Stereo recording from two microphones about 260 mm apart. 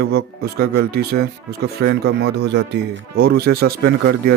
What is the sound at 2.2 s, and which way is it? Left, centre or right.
Speech, right.